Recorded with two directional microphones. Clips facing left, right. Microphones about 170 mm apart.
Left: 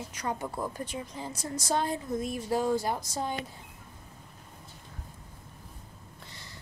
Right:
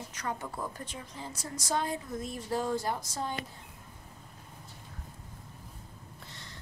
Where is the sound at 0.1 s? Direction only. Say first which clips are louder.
Left 3 dB; 15° left (ahead or behind).